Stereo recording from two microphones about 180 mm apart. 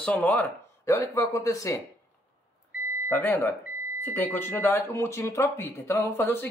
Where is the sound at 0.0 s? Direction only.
10° left (ahead or behind).